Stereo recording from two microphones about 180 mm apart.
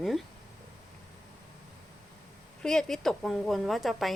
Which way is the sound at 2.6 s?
5° left (ahead or behind).